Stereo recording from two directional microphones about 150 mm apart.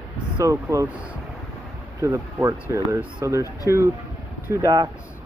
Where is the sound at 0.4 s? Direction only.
20° right (ahead or behind).